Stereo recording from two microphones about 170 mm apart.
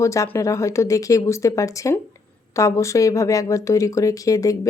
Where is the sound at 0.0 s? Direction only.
15° left (ahead or behind).